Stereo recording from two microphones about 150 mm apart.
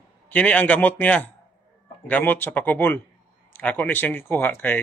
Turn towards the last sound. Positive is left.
turn(degrees=10)  # may be behind; listen again after turning